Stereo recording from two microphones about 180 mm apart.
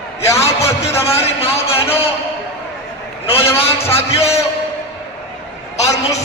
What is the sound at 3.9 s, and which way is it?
Music, 35° left (ahead or behind).